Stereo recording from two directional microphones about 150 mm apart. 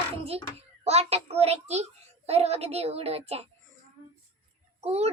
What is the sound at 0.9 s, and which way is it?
A child's voice, 45° right (ahead or behind).